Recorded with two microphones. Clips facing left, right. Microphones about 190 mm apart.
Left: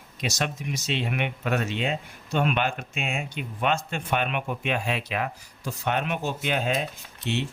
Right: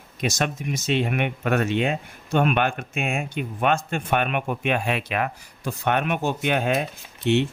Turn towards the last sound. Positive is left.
turn(degrees=-55)  # may be behind; listen again after turning